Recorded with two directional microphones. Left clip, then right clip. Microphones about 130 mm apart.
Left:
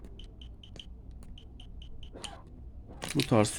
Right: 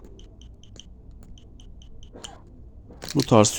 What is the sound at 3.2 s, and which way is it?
Speech, 25° right (ahead or behind).